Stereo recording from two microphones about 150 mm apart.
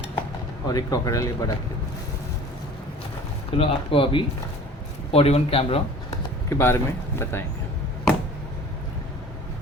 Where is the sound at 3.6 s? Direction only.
35° left (ahead or behind).